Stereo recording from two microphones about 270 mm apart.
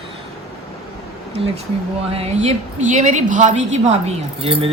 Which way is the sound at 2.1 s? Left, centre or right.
Right.